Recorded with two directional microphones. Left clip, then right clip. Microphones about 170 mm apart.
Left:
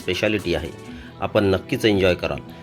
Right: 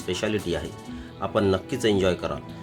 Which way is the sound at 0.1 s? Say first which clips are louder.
Left 5 dB; 20° left (ahead or behind).